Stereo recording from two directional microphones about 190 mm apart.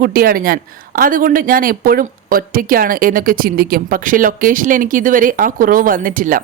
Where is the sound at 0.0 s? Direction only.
50° right (ahead or behind).